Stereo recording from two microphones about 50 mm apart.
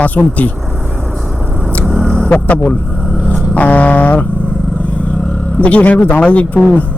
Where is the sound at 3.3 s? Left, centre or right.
Left.